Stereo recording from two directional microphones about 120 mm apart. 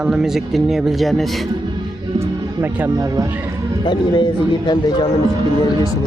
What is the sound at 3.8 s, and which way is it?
Speech, 40° left (ahead or behind).